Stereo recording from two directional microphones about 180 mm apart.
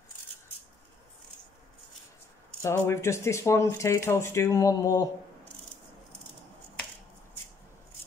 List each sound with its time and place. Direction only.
2.6 s speech: 15° left (ahead or behind)